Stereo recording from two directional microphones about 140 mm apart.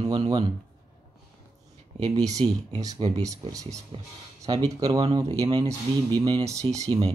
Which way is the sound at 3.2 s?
25° right (ahead or behind).